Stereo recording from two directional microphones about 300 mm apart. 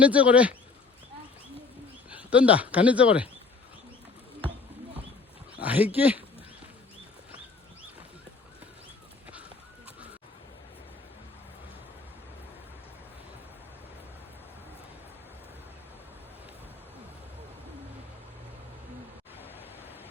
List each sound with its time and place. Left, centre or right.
0.0 s speech: centre
2.0 s speech: centre
5.6 s speech: centre